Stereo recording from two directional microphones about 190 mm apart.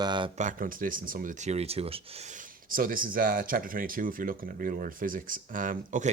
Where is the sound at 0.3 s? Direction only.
45° right (ahead or behind).